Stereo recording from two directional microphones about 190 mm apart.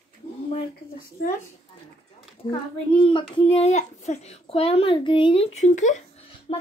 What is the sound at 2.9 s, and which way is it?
A child's voice, 25° left (ahead or behind).